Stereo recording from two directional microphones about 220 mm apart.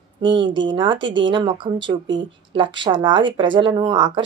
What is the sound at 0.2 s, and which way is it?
A woman's voice, 20° right (ahead or behind).